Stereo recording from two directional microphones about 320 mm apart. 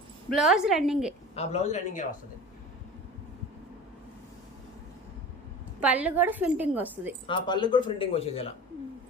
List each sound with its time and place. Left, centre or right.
0.3 s a woman's voice: centre
1.4 s a man's voice: left
5.8 s a woman's voice: centre
7.3 s speech: centre